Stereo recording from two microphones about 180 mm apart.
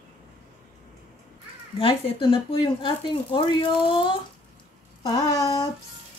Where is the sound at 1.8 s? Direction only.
30° left (ahead or behind).